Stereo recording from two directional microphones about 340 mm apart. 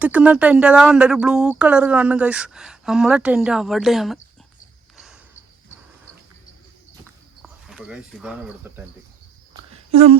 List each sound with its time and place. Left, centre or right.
0.0 s speech: centre
7.4 s speech: centre
9.5 s a sound: centre